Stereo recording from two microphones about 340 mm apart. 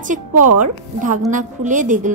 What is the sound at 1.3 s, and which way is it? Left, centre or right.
Speech, right.